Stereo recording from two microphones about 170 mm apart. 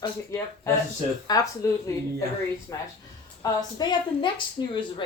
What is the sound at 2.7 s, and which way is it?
A woman's voice, 15° left (ahead or behind).